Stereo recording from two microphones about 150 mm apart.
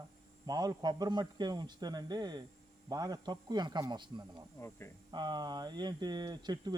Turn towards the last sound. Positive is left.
turn(degrees=-30)  # may be behind; listen again after turning